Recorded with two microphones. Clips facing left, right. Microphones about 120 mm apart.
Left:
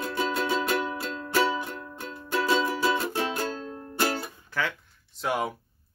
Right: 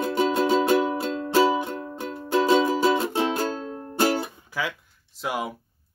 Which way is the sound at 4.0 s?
15° right (ahead or behind).